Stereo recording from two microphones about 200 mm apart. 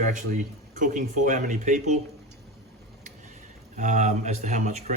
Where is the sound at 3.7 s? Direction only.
40° right (ahead or behind).